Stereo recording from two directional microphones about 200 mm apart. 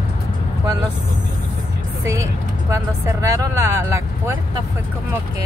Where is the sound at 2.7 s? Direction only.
15° right (ahead or behind).